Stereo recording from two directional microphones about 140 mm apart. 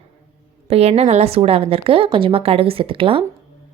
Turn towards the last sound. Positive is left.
turn(degrees=-40)  # may be behind; listen again after turning